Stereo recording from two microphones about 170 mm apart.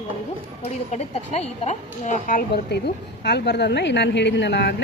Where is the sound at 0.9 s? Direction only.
40° left (ahead or behind).